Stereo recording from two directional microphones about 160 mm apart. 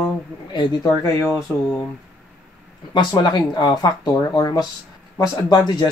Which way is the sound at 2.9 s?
25° left (ahead or behind).